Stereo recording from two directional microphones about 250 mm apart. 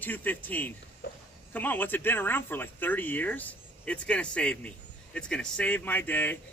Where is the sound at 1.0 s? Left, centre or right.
Left.